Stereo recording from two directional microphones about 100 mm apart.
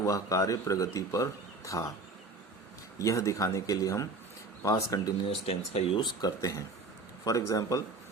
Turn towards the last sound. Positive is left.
turn(degrees=35)  # may be behind; listen again after turning